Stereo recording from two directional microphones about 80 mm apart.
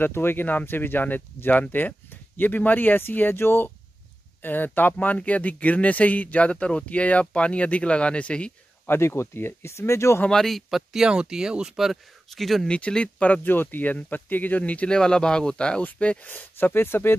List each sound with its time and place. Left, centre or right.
0.0 s speech: left; by 8.5 s centre
8.8 s speech: left
10.2 s speech: centre
12.6 s speech: centre; by 17.1 s left